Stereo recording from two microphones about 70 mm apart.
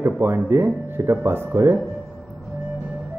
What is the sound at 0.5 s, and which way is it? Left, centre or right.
A man's voice, right.